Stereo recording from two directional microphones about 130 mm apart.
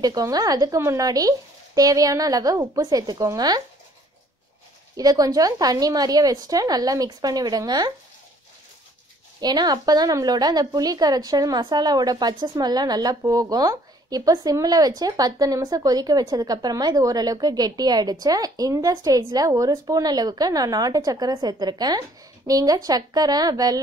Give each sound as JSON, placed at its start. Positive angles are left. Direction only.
{"t": 0.0, "sound": "a woman's voice", "side_deg": -30}
{"t": 4.9, "sound": "a woman's voice", "side_deg": -30}
{"t": 9.4, "sound": "a woman's voice", "side_deg": -30}